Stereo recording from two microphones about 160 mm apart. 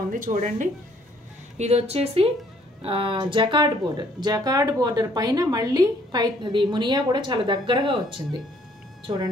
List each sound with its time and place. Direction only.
0.1 s speech: 55° right (ahead or behind)
1.6 s a woman's voice: 40° right (ahead or behind)